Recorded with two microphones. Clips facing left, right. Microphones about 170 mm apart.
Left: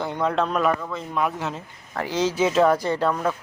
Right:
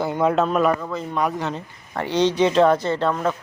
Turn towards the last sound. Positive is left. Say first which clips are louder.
# right 1 dB
turn(degrees=5)  # may be behind; listen again after turning